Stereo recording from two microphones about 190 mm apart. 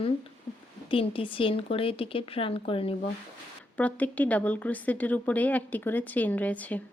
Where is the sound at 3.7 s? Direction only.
10° left (ahead or behind).